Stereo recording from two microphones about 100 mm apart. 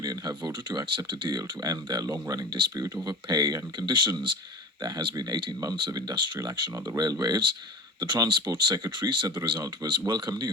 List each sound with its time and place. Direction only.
0.0 s speech: 40° right (ahead or behind)
2.5 s speech: 50° right (ahead or behind)
6.8 s speech: 40° right (ahead or behind)